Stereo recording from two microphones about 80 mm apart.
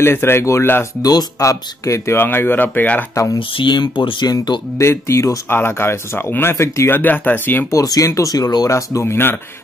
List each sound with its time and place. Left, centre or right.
0.0 s speech: left
1.0 s speech: left
3.3 s speech: left
4.7 s speech: left
5.5 s speech: left
7.0 s speech: left
7.7 s speech: left
8.6 s speech: left
9.0 s speech: left